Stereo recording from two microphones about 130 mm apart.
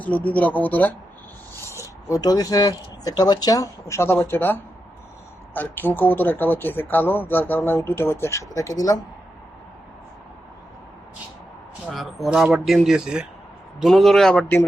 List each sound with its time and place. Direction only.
0.0 s speech: 10° left (ahead or behind)
1.8 s speech: 25° left (ahead or behind)
11.9 s speech: centre (ahead or behind)